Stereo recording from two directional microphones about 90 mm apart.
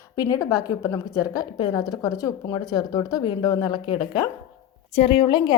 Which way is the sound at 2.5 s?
50° left (ahead or behind).